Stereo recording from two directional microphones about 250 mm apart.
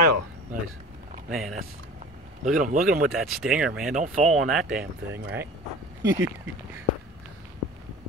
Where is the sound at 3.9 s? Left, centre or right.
Right.